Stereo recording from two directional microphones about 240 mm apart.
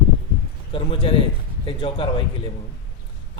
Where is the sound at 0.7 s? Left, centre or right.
Left.